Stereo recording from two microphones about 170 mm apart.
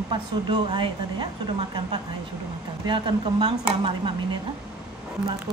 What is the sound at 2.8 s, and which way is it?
Dishes, 25° right (ahead or behind).